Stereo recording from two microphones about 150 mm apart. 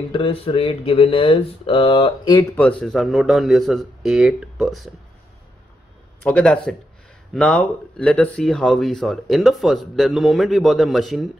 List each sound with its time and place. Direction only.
0.1 s speech: 35° left (ahead or behind)
2.5 s speech: 5° left (ahead or behind)
6.2 s speech: 5° left (ahead or behind)